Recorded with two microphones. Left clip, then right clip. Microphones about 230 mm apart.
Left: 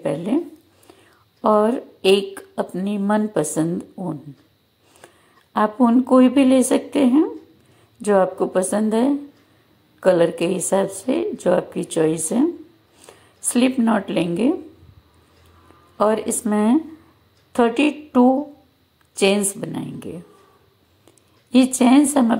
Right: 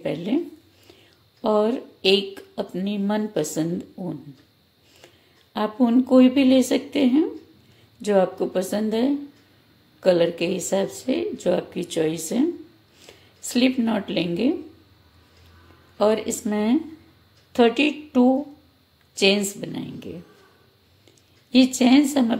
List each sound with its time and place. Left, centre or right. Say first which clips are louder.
0.0 s speech: left 3 dB; centre
1.4 s a woman's voice: left 4 dB; centre
16.0 s a woman's voice: left 2 dB; centre
21.7 s a woman's voice: left 3 dB; centre